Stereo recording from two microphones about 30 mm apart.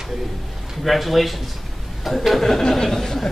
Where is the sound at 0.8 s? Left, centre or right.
Centre.